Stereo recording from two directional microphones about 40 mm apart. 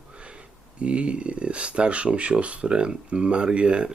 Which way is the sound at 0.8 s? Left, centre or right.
Right.